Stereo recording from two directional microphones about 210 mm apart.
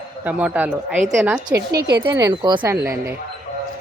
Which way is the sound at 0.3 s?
5° right (ahead or behind).